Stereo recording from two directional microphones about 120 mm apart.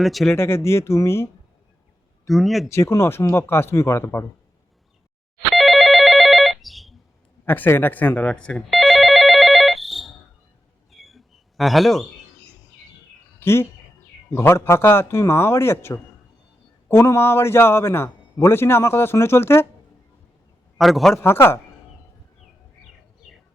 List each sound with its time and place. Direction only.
0.0 s speech: centre (ahead or behind)
0.3 s a man's voice: 20° left (ahead or behind)
2.2 s speech: centre (ahead or behind)
2.6 s a man's voice: 25° left (ahead or behind)
5.5 s telephone bell ringing: centre (ahead or behind)
7.4 s speech: 15° left (ahead or behind)
8.8 s telephone bell ringing: centre (ahead or behind)
10.9 s a sound: centre (ahead or behind)
13.4 s a man's voice: 20° left (ahead or behind)
20.7 s speech: centre (ahead or behind)
21.2 s a man's voice: 20° left (ahead or behind)